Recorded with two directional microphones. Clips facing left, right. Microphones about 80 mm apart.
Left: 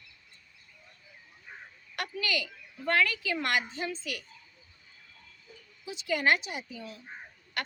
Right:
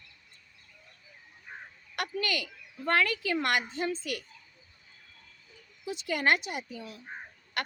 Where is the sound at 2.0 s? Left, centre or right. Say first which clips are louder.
Right 1 dB; right.